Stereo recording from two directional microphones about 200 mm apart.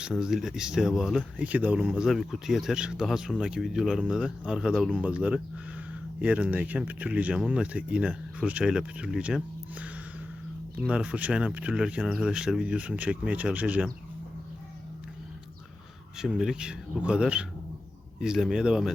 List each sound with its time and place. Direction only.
0.0 s speech: centre (ahead or behind)
16.1 s speech: 5° right (ahead or behind)